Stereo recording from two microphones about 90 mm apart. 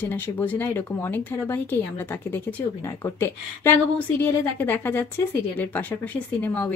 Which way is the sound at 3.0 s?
25° left (ahead or behind).